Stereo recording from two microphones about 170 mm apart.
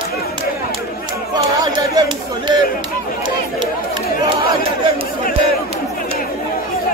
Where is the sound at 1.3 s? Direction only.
25° right (ahead or behind).